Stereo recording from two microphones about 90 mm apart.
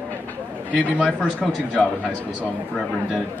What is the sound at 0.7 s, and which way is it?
A man's voice, 10° left (ahead or behind).